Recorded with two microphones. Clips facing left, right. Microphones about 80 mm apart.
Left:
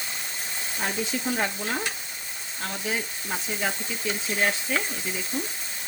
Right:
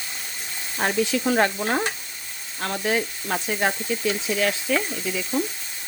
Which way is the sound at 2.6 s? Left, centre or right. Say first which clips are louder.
Right 6 dB; right.